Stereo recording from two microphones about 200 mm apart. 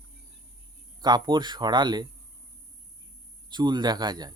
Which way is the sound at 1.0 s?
20° right (ahead or behind).